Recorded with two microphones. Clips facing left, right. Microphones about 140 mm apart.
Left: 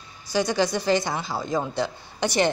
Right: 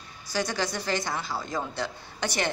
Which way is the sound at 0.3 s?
20° left (ahead or behind).